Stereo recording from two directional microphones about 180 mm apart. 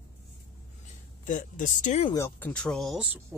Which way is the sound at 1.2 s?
45° left (ahead or behind).